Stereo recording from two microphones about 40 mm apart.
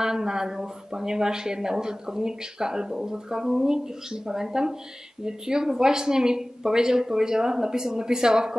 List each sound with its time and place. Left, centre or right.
0.0 s speech: centre